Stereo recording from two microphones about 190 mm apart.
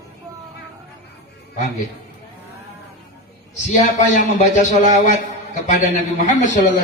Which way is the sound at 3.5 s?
40° left (ahead or behind).